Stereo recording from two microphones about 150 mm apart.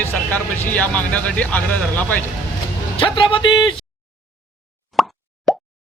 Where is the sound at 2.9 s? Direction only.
35° left (ahead or behind).